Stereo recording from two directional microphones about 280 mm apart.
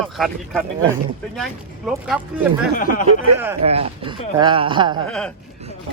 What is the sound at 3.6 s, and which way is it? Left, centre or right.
Speech, right.